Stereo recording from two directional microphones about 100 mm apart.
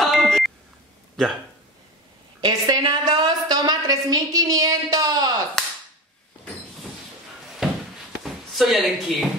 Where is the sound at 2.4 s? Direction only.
45° right (ahead or behind).